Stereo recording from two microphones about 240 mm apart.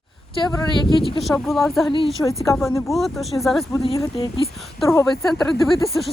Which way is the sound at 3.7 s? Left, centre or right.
Centre.